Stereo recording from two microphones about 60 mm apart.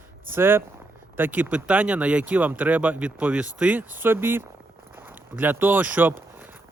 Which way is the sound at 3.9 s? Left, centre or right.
Right.